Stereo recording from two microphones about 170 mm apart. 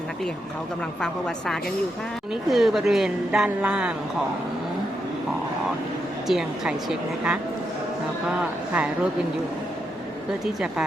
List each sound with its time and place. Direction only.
2.5 s speech: centre (ahead or behind)
6.2 s speech: centre (ahead or behind)
10.4 s speech: 5° right (ahead or behind)